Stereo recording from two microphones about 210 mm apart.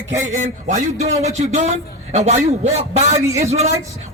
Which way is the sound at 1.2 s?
30° right (ahead or behind).